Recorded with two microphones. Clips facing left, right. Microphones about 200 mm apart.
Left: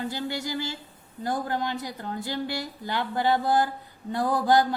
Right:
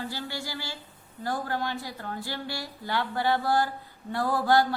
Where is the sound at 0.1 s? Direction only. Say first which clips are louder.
Left 5 dB; 20° left (ahead or behind).